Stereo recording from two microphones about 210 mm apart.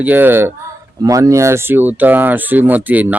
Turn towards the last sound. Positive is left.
turn(degrees=-5)  # may be behind; listen again after turning